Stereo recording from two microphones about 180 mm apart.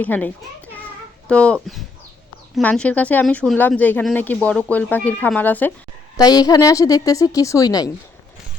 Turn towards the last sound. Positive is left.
turn(degrees=20)  # may be behind; listen again after turning